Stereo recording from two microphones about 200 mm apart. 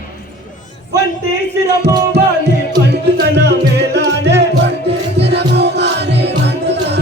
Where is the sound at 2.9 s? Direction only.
60° right (ahead or behind).